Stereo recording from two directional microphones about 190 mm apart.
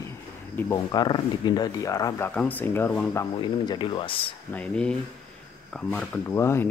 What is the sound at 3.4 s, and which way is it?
Speech, 25° left (ahead or behind).